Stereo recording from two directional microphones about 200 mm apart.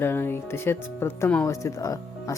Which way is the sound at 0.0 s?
10° left (ahead or behind).